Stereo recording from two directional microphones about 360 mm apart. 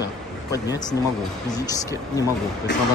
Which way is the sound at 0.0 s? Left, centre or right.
Centre.